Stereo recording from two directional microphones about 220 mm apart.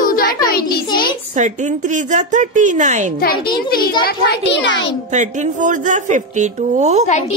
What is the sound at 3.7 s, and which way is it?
A child's voice, 40° left (ahead or behind).